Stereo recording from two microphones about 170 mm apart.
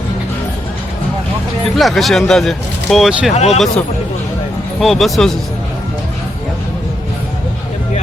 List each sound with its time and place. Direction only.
1.7 s speech: centre (ahead or behind)
3.3 s speech: 40° left (ahead or behind)
4.8 s speech: centre (ahead or behind)